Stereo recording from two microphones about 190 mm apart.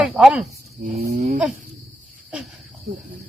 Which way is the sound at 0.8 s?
50° right (ahead or behind).